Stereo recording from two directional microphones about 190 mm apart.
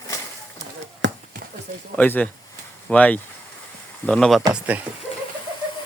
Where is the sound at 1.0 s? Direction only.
70° right (ahead or behind).